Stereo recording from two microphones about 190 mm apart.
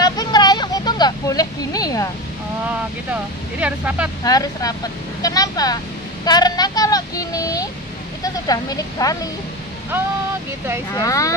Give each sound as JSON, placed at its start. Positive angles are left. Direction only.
{"t": 0.0, "sound": "vehicle", "side_deg": 20}
{"t": 3.1, "sound": "speech", "side_deg": -5}
{"t": 4.2, "sound": "a woman's voice", "side_deg": 20}
{"t": 11.0, "sound": "speech", "side_deg": 15}